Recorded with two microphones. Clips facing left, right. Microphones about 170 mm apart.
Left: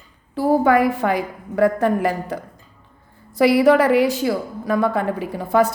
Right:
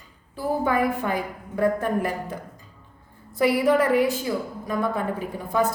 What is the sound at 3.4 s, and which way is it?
A woman's voice, 80° left.